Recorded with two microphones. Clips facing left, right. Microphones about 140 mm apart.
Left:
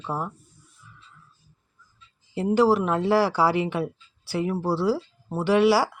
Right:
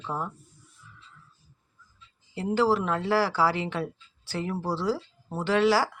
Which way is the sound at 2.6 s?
15° left (ahead or behind).